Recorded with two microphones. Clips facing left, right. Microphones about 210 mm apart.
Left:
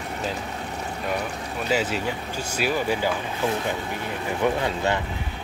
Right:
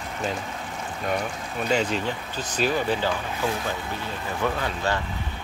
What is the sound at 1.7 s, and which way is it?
Speech, 5° left (ahead or behind).